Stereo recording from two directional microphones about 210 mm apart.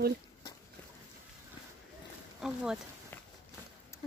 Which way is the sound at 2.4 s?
5° right (ahead or behind).